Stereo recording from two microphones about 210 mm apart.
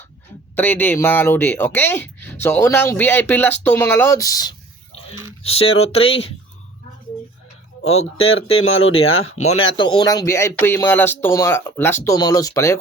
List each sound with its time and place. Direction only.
0.5 s speech: 10° left (ahead or behind)
5.4 s speech: 25° left (ahead or behind)
7.9 s speech: 70° left (ahead or behind)
9.5 s speech: 25° left (ahead or behind)